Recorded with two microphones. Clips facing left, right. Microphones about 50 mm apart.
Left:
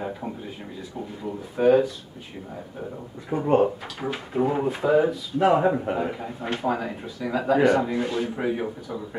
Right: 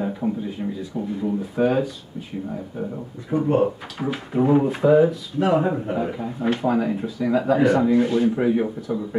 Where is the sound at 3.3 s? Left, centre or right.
Left.